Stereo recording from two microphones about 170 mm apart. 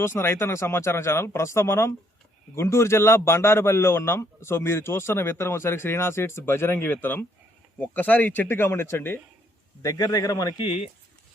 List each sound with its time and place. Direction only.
0.0 s a man's voice: 15° left (ahead or behind); by 10.9 s 35° left (ahead or behind)